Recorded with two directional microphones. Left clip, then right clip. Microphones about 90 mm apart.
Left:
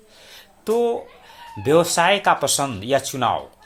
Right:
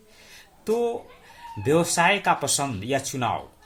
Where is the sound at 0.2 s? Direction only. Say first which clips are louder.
Left 4 dB; 20° left (ahead or behind).